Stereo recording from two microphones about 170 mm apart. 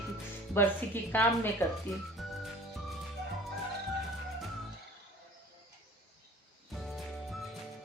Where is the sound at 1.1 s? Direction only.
10° left (ahead or behind).